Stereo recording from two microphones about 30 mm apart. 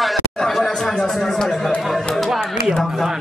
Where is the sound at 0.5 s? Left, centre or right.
Centre.